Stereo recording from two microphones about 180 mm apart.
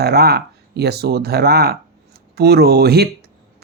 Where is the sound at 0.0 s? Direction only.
60° right (ahead or behind).